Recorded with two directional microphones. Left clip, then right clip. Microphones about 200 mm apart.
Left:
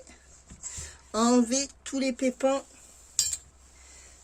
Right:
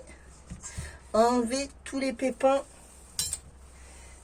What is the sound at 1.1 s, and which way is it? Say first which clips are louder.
Speech: right 1 dB; 60° left (ahead or behind).